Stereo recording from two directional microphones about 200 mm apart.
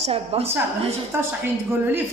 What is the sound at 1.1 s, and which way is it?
Speech, 15° right (ahead or behind).